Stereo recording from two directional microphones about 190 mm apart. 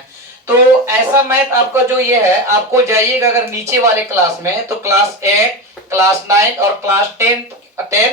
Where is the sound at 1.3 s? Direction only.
15° right (ahead or behind).